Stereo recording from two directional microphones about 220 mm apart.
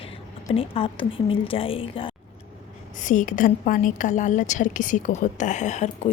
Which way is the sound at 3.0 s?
35° left (ahead or behind).